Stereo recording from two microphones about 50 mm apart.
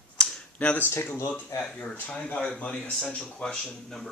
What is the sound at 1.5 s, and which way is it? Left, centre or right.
Speech, left.